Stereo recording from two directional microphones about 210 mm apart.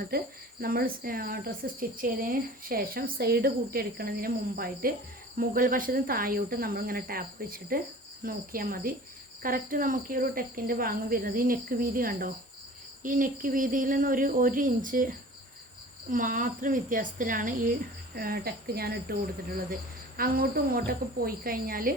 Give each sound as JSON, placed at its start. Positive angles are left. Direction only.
{"t": 0.1, "sound": "speech", "side_deg": -45}
{"t": 20.1, "sound": "speech", "side_deg": -45}